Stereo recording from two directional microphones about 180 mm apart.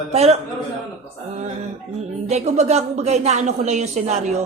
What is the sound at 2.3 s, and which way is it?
Speech, 40° right (ahead or behind).